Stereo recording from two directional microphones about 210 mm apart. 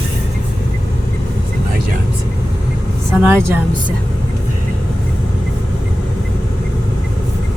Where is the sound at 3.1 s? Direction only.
10° right (ahead or behind).